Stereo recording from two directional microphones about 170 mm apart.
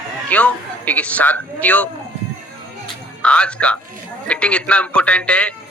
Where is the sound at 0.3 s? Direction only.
10° left (ahead or behind).